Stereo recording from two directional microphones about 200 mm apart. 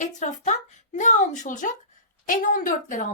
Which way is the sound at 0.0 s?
35° left (ahead or behind).